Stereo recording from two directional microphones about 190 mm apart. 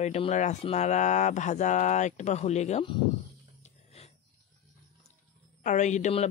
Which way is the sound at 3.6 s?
35° left (ahead or behind).